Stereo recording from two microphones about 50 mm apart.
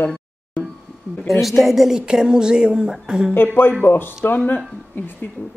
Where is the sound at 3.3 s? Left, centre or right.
Left.